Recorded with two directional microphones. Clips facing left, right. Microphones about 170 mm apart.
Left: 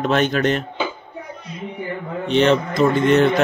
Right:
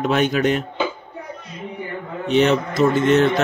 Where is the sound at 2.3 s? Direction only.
5° right (ahead or behind).